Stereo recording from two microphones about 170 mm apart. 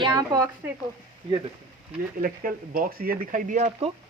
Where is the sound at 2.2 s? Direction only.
55° right (ahead or behind).